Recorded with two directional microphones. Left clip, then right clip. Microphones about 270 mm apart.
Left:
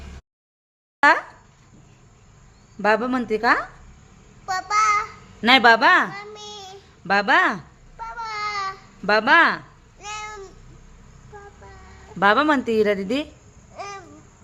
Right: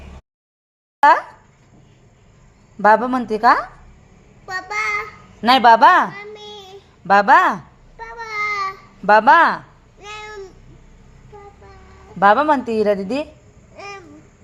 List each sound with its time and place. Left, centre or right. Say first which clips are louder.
2.8 s a woman's voice: right 6 dB; centre
4.4 s a sound: left 3 dB; centre
6.1 s a sound: right 2 dB; centre
7.1 s a woman's voice: right 6 dB; centre
8.0 s child singing: right 4 dB; centre
9.0 s a woman's voice: right 5 dB; centre
10.0 s babbling: even; centre
12.2 s a woman's voice: right 4 dB; centre
13.7 s babbling: even; centre